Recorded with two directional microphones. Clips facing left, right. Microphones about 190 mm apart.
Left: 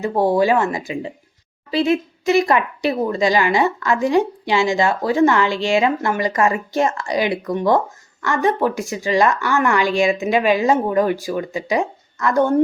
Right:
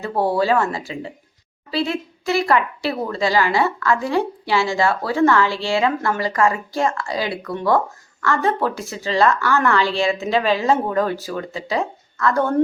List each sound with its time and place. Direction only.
0.0 s a woman's voice: 15° left (ahead or behind)